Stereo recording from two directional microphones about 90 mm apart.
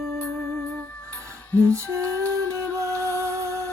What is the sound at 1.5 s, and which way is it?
Lullaby, 30° right (ahead or behind).